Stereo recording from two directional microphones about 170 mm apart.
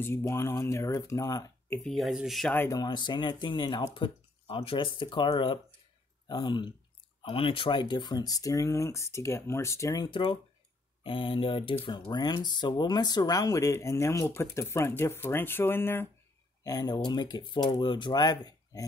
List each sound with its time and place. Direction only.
0.0 s speech: 15° left (ahead or behind)
1.9 s speech: centre (ahead or behind)
2.5 s speech: 10° left (ahead or behind)
2.8 s speech: 25° left (ahead or behind)